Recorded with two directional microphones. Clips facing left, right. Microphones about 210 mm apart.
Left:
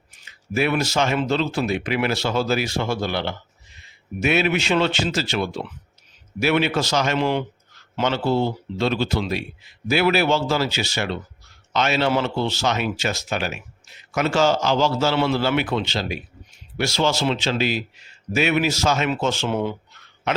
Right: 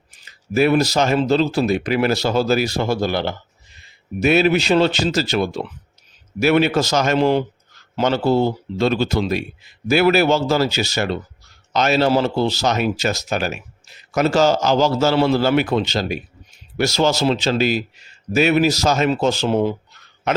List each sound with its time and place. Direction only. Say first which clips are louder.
0.3 s speech: right 6 dB; 40° right (ahead or behind)